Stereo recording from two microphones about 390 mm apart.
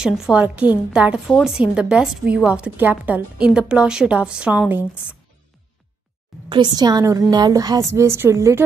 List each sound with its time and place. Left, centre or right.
0.0 s a woman's voice: centre
6.5 s a woman's voice: centre